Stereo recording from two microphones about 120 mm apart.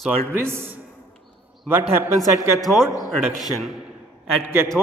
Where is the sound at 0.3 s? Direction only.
20° right (ahead or behind).